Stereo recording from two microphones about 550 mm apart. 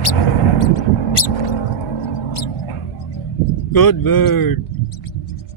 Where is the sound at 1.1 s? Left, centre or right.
Left.